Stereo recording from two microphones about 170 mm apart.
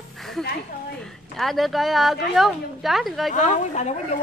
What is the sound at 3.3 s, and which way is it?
Speech, 45° left (ahead or behind).